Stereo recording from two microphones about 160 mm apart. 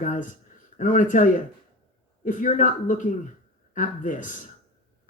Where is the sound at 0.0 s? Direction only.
50° left (ahead or behind).